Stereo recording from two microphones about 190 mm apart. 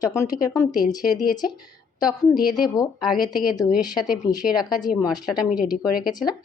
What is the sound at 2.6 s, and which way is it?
Speech, 20° left (ahead or behind).